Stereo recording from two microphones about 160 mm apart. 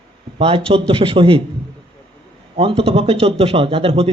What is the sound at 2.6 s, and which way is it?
Speech, 35° right (ahead or behind).